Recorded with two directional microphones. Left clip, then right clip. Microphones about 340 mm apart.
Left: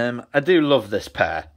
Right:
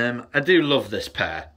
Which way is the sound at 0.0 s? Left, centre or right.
Centre.